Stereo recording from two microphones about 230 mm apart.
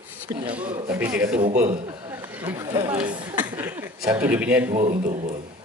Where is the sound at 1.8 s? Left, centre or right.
Centre.